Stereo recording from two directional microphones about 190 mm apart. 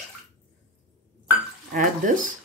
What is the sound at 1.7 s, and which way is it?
Speech, 45° right (ahead or behind).